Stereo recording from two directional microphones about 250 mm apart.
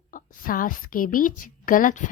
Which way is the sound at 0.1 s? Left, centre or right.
Left.